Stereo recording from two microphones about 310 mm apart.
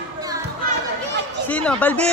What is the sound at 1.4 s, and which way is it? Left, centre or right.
Speech, centre.